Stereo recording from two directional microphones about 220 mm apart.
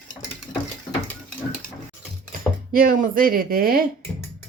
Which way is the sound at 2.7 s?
40° right (ahead or behind).